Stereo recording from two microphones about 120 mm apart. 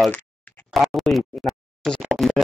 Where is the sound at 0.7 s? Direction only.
Centre (ahead or behind).